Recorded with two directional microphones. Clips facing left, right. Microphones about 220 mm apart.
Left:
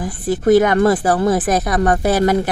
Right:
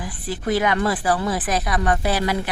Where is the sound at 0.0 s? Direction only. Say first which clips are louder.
Left 10 dB; 45° left (ahead or behind).